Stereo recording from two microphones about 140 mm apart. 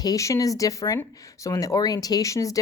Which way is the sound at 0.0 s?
25° left (ahead or behind).